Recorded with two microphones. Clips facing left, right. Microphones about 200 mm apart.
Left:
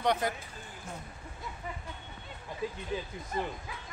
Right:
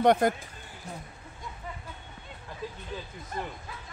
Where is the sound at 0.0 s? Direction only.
50° right (ahead or behind).